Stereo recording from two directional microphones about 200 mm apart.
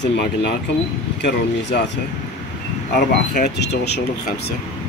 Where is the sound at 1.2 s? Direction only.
55° left (ahead or behind).